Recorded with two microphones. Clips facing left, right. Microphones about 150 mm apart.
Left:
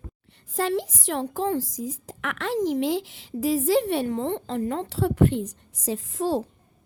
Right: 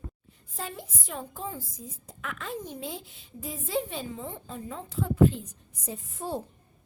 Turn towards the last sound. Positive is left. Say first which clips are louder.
# left 9 dB
turn(degrees=90)